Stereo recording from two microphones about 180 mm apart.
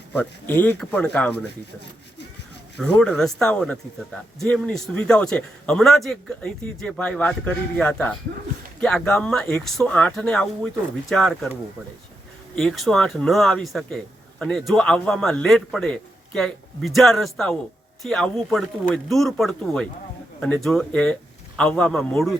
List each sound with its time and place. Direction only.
0.1 s speech: 10° left (ahead or behind)
2.7 s speech: 5° left (ahead or behind)
12.5 s speech: centre (ahead or behind)